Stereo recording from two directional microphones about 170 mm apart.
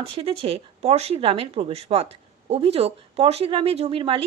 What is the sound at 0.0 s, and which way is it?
Speech, 35° right (ahead or behind).